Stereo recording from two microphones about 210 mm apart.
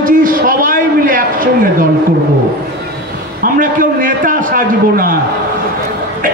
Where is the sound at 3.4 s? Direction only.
40° right (ahead or behind).